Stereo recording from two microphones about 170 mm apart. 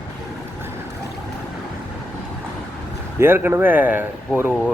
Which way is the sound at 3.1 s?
15° right (ahead or behind).